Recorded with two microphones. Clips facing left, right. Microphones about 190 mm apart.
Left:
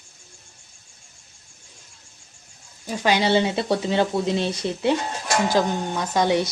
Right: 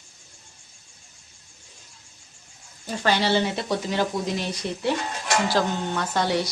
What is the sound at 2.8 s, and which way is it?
Speech, 15° left (ahead or behind).